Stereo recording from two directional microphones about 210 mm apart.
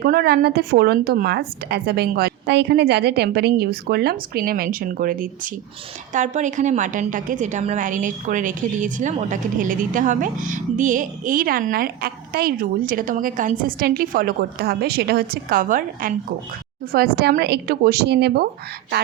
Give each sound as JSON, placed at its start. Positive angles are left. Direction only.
{"t": 0.0, "sound": "a woman's voice", "side_deg": -45}
{"t": 17.2, "sound": "a woman's voice", "side_deg": -50}